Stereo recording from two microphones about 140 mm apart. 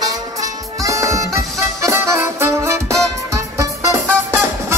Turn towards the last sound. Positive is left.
turn(degrees=-20)  # may be behind; listen again after turning